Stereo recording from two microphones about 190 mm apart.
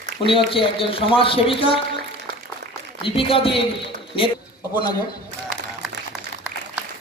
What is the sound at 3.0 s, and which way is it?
Speech, 30° left (ahead or behind).